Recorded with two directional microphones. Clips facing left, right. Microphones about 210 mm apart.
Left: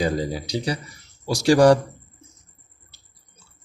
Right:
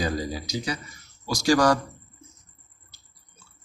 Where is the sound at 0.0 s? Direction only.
25° left (ahead or behind).